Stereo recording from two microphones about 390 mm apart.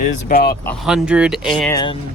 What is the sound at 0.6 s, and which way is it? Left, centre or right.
Speech, centre.